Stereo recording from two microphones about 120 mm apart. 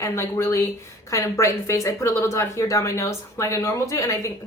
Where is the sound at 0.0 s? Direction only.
25° left (ahead or behind).